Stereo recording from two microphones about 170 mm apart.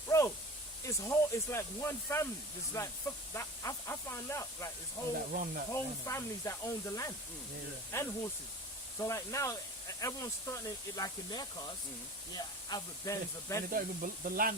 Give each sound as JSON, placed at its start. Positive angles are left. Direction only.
{"t": 0.1, "sound": "a sound", "side_deg": 20}
{"t": 0.9, "sound": "speech", "side_deg": 15}
{"t": 5.3, "sound": "speech", "side_deg": -55}
{"t": 5.7, "sound": "speech", "side_deg": 15}
{"t": 13.7, "sound": "speech", "side_deg": -55}